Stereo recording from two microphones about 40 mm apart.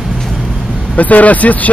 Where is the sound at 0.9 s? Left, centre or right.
Left.